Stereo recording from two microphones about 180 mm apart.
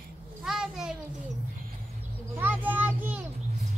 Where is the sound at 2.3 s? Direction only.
10° right (ahead or behind).